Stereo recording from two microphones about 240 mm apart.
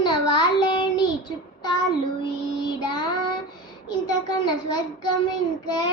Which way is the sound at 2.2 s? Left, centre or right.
Centre.